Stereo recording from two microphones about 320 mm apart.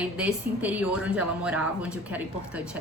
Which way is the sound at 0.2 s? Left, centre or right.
Centre.